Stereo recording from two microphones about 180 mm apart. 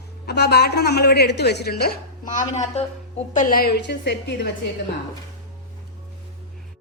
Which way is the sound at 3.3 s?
50° left (ahead or behind).